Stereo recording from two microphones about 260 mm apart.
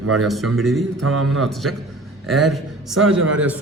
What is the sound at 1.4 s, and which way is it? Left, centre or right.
A man's voice, centre.